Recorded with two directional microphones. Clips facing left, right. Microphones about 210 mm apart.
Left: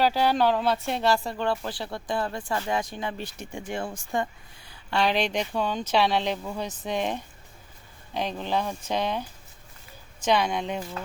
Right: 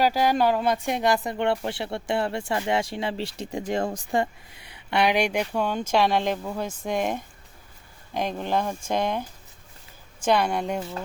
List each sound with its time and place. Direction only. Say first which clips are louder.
0.0 s speech: right 1 dB; 10° right (ahead or behind); by 3.2 s 30° right (ahead or behind)
3.2 s speech: right 5 dB; 90° right
3.8 s speech: right 3 dB; 40° right (ahead or behind)
4.7 s speech: right 2 dB; 20° right (ahead or behind)